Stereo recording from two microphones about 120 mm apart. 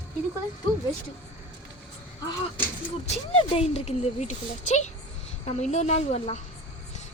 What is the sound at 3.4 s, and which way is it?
A woman's voice, 55° left (ahead or behind).